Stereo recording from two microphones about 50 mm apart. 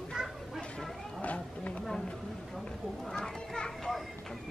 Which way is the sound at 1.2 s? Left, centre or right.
Left.